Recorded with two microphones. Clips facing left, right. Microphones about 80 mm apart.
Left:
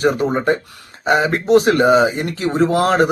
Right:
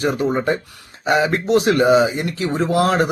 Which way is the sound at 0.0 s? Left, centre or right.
Left.